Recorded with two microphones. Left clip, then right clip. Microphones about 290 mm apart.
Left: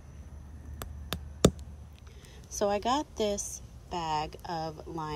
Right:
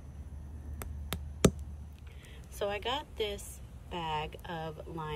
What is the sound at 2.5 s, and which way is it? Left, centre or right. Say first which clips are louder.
Speech: left 6 dB; centre.